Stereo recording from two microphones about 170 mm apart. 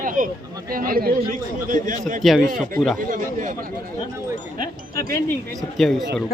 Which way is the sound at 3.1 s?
45° right (ahead or behind).